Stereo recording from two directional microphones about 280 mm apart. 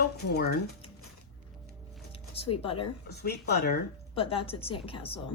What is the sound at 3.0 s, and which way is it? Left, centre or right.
Speech, left.